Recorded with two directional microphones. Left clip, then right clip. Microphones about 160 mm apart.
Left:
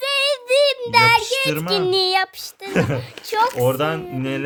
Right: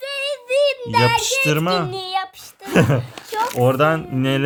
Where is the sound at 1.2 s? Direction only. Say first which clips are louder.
Right 2 dB; 45° right (ahead or behind).